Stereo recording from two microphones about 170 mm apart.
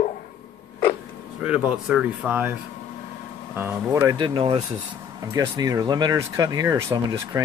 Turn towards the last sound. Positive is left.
turn(degrees=-20)  # may be behind; listen again after turning